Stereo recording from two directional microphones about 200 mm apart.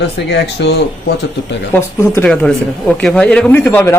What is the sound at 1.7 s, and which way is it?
A man's voice, 10° left (ahead or behind).